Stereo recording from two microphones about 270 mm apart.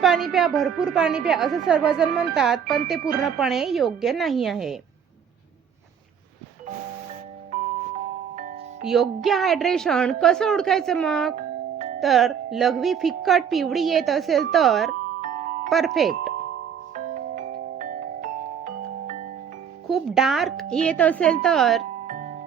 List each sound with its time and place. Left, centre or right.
0.0 s a woman's voice: centre
8.8 s a woman's voice: centre
15.2 s music: right
15.7 s a woman's voice: centre
16.9 s music: right
19.9 s a woman's voice: centre
22.0 s music: right